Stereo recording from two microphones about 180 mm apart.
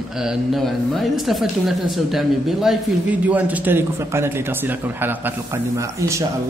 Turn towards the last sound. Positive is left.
turn(degrees=-15)  # may be behind; listen again after turning